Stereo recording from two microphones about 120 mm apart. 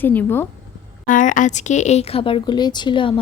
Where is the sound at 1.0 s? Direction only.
90° left; by 2.4 s 50° left (ahead or behind).